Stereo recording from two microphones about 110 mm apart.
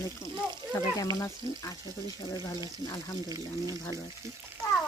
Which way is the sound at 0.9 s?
30° left (ahead or behind).